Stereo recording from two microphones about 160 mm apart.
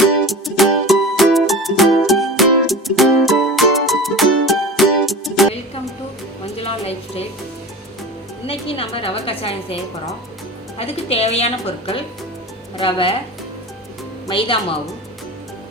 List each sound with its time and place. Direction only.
0.0 s music: centre (ahead or behind)
6.4 s music: 40° left (ahead or behind)
8.4 s a woman's voice: 35° left (ahead or behind)
10.8 s a woman's voice: 40° left (ahead or behind)
14.3 s a woman's voice: 30° left (ahead or behind)